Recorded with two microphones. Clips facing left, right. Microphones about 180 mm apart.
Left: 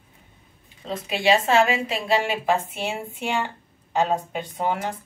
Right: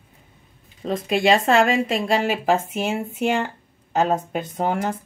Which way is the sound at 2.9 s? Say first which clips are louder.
Right 7 dB; 45° right (ahead or behind).